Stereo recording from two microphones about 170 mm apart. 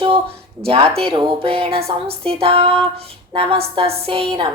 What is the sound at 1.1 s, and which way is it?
A woman's voice, 30° right (ahead or behind).